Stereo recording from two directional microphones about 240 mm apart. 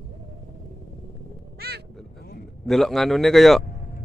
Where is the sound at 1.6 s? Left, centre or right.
Right.